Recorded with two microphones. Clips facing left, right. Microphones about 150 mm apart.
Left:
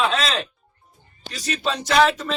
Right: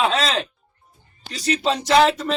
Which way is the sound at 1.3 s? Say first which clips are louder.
Right 4 dB; 25° right (ahead or behind).